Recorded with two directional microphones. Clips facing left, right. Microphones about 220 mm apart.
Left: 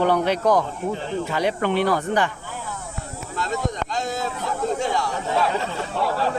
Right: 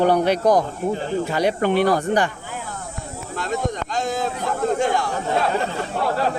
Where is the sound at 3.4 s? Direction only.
55° right (ahead or behind).